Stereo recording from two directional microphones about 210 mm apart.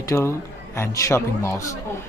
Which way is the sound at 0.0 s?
15° left (ahead or behind).